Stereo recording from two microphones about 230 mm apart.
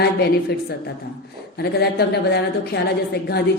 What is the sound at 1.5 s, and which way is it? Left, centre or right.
A woman's voice, left.